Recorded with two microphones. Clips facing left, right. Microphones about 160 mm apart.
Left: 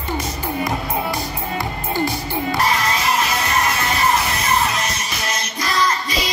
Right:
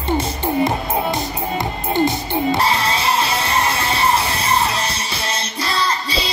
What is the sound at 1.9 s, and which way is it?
Music, 20° right (ahead or behind).